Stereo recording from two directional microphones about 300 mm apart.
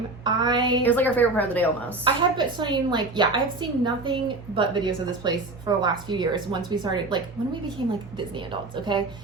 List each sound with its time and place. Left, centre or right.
0.3 s a woman's voice: centre
0.8 s a woman's voice: centre
2.4 s a woman's voice: centre